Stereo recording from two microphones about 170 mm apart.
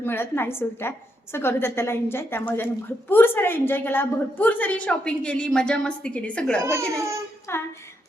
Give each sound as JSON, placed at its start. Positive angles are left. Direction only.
{"t": 0.0, "sound": "a woman's voice", "side_deg": 15}
{"t": 6.6, "sound": "speech", "side_deg": -15}
{"t": 7.5, "sound": "a woman's voice", "side_deg": 15}